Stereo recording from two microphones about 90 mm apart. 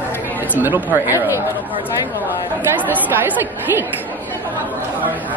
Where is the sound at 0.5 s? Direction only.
20° right (ahead or behind).